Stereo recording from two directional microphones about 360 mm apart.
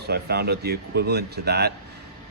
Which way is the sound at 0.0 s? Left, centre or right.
Right.